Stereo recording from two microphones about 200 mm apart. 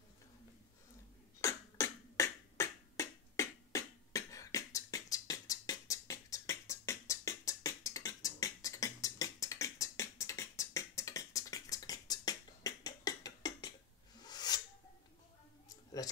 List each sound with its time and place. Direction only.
1.4 s beatboxing: 15° left (ahead or behind)
16.0 s speech: 20° left (ahead or behind)